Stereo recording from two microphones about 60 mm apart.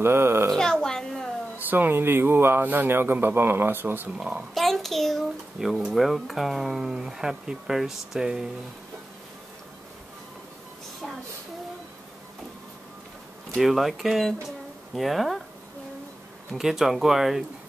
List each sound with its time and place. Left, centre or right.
0.0 s a woman's voice: right
0.5 s a sound: centre
1.7 s a man's voice: right
4.6 s a sound: centre
5.9 s speech: centre
13.6 s speech: centre
16.5 s speech: centre